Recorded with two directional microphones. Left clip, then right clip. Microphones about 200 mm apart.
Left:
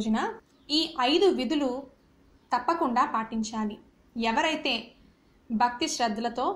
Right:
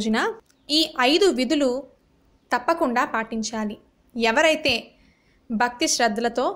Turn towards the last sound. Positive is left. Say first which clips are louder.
# right 6 dB
turn(degrees=-50)  # may be behind; listen again after turning